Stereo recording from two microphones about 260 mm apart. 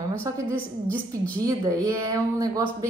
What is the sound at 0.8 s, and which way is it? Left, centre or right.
Speech, centre.